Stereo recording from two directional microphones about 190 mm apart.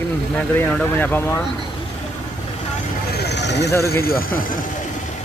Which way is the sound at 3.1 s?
60° left (ahead or behind).